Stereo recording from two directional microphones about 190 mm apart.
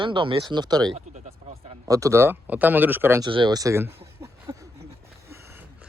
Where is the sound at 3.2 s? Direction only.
25° right (ahead or behind).